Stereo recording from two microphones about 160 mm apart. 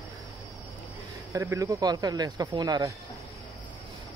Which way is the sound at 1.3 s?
20° right (ahead or behind).